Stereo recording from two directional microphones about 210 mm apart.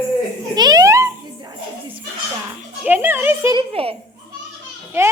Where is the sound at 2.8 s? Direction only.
10° right (ahead or behind).